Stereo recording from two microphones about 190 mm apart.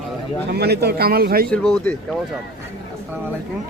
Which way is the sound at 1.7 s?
10° left (ahead or behind).